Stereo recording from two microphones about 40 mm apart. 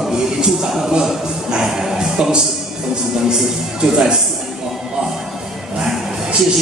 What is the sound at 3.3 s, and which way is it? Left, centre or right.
Speech, centre.